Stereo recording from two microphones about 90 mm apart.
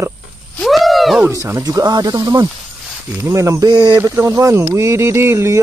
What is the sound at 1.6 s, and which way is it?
Speech, 45° right (ahead or behind).